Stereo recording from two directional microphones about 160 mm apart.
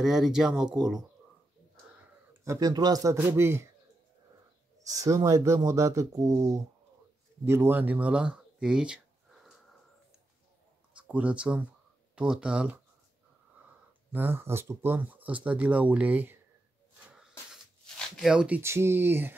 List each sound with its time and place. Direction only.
0.0 s speech: centre (ahead or behind)
2.0 s speech: 20° right (ahead or behind)
4.8 s speech: 20° right (ahead or behind); by 9.6 s centre (ahead or behind)
11.0 s speech: 10° right (ahead or behind)
14.1 s speech: 15° right (ahead or behind)
17.1 s a sound: 5° right (ahead or behind)
18.6 s speech: 15° right (ahead or behind)